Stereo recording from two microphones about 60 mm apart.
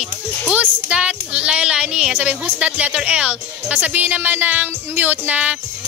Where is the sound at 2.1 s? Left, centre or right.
Right.